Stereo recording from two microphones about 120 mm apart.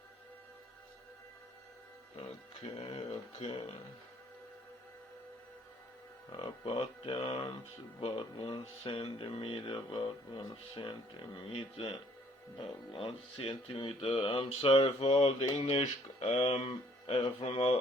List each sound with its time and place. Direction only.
2.7 s speech: 60° left (ahead or behind)
6.3 s speech: 50° left (ahead or behind)
12.5 s speech: 45° left (ahead or behind)
15.5 s speech: 60° left (ahead or behind)